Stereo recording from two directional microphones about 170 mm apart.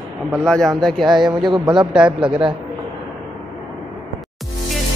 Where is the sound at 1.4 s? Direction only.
30° right (ahead or behind).